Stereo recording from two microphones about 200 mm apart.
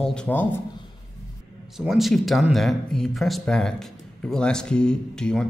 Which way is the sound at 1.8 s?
Centre (ahead or behind).